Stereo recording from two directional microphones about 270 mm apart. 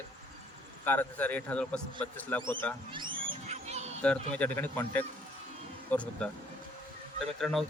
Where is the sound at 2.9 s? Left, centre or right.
Centre.